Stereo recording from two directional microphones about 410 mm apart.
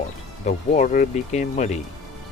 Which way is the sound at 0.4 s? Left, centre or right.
Centre.